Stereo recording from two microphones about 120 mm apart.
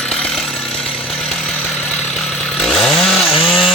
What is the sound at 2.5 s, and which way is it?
Chainsaw, 5° left (ahead or behind).